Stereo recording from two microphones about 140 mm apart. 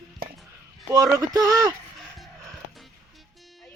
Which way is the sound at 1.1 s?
25° right (ahead or behind).